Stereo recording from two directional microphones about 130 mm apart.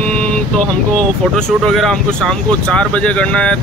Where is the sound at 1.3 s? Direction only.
5° left (ahead or behind).